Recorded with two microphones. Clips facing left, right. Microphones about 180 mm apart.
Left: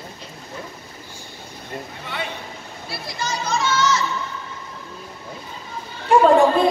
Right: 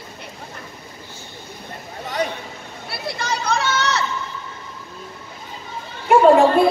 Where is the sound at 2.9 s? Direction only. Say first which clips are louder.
Right 3 dB; 65° right (ahead or behind).